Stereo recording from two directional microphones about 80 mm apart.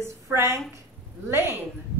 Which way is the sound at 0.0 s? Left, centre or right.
Right.